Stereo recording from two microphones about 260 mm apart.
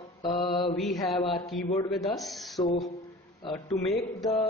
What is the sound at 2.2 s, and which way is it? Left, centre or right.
Speech, centre.